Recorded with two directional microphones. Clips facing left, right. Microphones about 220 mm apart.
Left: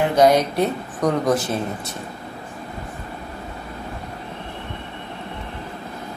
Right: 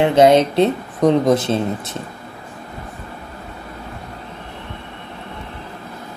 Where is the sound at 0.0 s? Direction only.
25° right (ahead or behind).